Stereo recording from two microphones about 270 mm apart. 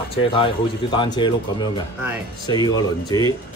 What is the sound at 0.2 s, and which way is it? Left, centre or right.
A man's voice, centre.